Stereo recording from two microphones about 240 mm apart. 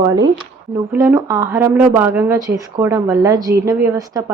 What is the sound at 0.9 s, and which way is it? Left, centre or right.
Speech, centre.